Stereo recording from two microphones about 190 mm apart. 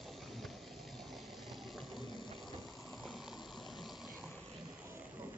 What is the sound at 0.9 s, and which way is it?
Water, centre (ahead or behind).